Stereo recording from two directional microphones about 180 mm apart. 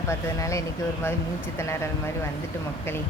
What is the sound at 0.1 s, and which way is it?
Speech, 15° left (ahead or behind).